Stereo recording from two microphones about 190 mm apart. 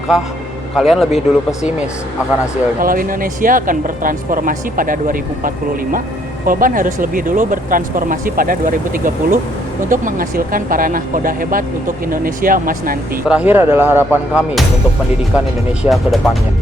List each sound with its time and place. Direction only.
0.8 s speech: centre (ahead or behind)
2.8 s speech: 45° right (ahead or behind)
13.2 s speech: 5° right (ahead or behind)
15.8 s speech: centre (ahead or behind)